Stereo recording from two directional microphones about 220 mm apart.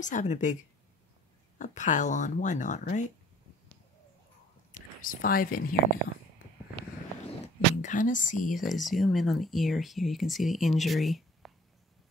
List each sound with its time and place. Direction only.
0.0 s speech: 35° left (ahead or behind)
1.6 s speech: 35° left (ahead or behind)
5.0 s speech: 40° left (ahead or behind)
7.4 s speech: 35° left (ahead or behind)
8.5 s speech: centre (ahead or behind)